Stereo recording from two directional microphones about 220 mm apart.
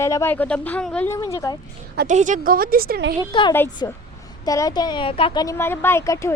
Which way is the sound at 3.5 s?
10° left (ahead or behind).